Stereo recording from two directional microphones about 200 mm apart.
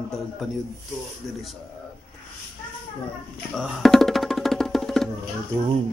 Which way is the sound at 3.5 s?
Centre (ahead or behind).